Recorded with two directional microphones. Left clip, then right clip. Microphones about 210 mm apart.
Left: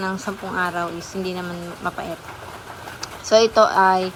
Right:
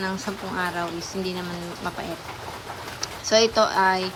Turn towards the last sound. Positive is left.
turn(degrees=-10)  # may be behind; listen again after turning